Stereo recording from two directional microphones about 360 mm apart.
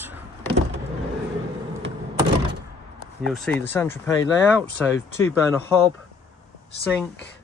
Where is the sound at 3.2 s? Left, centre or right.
Centre.